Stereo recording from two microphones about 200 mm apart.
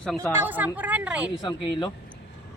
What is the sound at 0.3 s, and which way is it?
Speech, 10° right (ahead or behind).